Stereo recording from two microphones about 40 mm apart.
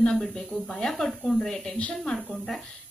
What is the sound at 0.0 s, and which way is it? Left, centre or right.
A woman's voice, centre.